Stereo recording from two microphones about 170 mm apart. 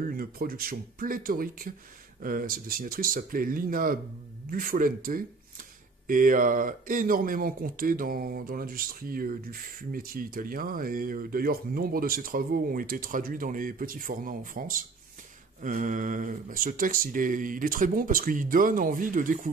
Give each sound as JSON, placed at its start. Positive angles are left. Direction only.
{"t": 0.1, "sound": "speech", "side_deg": -60}